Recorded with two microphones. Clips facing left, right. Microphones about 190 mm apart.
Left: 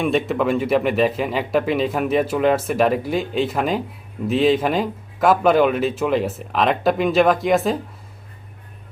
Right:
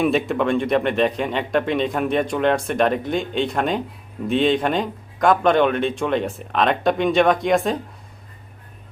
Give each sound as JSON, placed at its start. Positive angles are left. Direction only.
{"t": 0.0, "sound": "speech", "side_deg": 0}